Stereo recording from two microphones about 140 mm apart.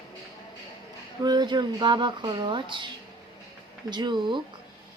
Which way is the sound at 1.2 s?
30° right (ahead or behind).